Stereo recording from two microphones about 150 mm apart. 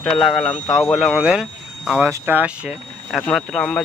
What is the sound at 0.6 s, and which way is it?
Speech, 25° left (ahead or behind).